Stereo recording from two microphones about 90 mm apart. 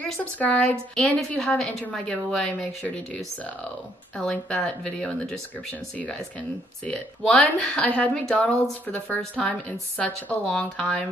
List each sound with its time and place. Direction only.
0.0 s speech: 15° left (ahead or behind)
6.9 s speech: 5° left (ahead or behind)